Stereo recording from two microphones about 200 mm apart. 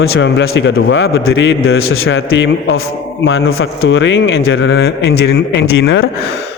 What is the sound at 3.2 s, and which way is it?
A man's voice, 85° left.